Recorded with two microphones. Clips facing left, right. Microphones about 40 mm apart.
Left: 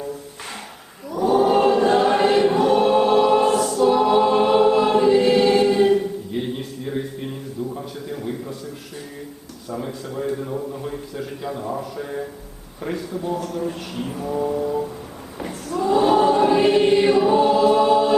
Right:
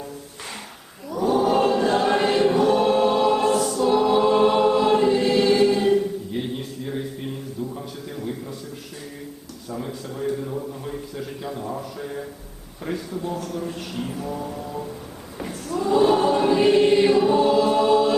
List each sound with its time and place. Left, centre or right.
1.1 s chant: centre
1.5 s choir: centre
7.7 s a sound: centre
9.6 s a sound: centre
12.8 s speech: centre
15.7 s choir: centre